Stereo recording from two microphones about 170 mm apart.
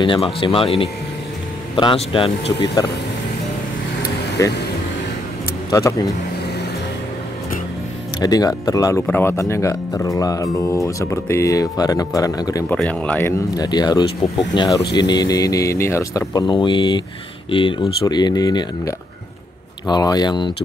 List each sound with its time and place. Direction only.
0.0 s speech: 30° left (ahead or behind)
2.6 s speech: 25° left (ahead or behind)
4.4 s speech: 20° left (ahead or behind)
5.7 s speech: 20° left (ahead or behind)
8.2 s speech: 20° left (ahead or behind)
12.6 s speech: 5° left (ahead or behind)
13.6 s speech: 25° left (ahead or behind)